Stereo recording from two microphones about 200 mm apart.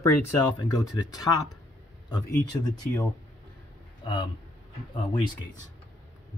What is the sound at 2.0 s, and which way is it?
Speech, 20° left (ahead or behind).